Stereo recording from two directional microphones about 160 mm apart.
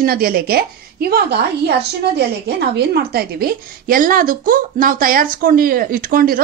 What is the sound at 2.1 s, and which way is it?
A woman's voice, 90° right.